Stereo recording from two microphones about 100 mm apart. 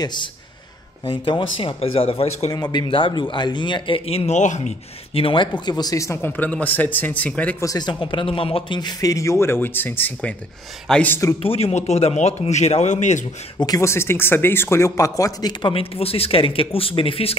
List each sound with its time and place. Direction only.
0.0 s speech: 50° left (ahead or behind)
1.0 s speech: 60° left (ahead or behind)
1.8 s speech: 75° left (ahead or behind)
2.5 s speech: 45° left (ahead or behind); by 4.3 s 80° left
5.1 s speech: 60° left (ahead or behind); by 6.3 s 30° left (ahead or behind)
6.3 s speech: 15° left (ahead or behind)
7.6 s speech: 40° left (ahead or behind)
8.0 s speech: 60° left (ahead or behind)
8.7 s speech: 45° left (ahead or behind)
9.1 s a man's voice: 30° left (ahead or behind); by 11.1 s 15° left (ahead or behind)
11.4 s speech: 85° left
13.7 s a man's voice: 25° left (ahead or behind)
15.6 s speech: 70° left (ahead or behind)